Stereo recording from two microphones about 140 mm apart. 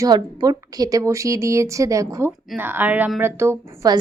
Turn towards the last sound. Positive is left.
turn(degrees=-20)  # may be behind; listen again after turning